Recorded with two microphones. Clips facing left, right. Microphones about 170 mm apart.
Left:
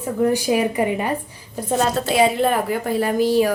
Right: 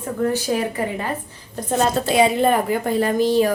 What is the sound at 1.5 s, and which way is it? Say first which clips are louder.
A woman's voice: even; 5° left (ahead or behind).